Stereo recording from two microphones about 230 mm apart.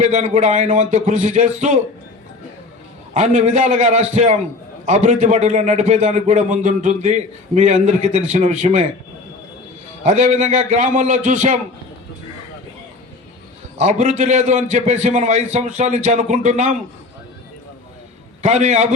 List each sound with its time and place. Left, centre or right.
0.0 s a man's voice: right
3.2 s a man's voice: right
10.0 s a man's voice: right
13.7 s a man's voice: right
18.4 s a man's voice: right